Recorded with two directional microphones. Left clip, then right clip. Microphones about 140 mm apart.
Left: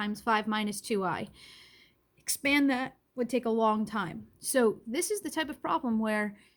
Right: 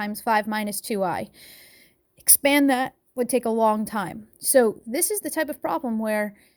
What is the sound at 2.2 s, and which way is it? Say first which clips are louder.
A woman's voice: right 7 dB; 90° right.